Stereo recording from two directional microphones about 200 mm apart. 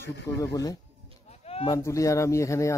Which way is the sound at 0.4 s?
15° left (ahead or behind).